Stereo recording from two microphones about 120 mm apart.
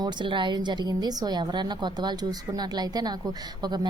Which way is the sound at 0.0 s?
40° right (ahead or behind).